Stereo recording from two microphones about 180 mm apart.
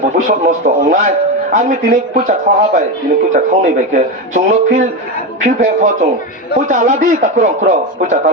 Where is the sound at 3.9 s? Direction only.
40° right (ahead or behind).